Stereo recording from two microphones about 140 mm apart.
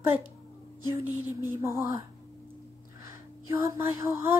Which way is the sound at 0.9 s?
20° right (ahead or behind).